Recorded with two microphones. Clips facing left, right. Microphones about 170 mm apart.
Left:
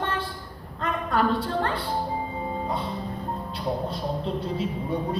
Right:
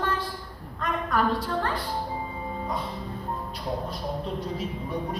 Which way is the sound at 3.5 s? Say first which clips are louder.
Left 6 dB; 30° left (ahead or behind).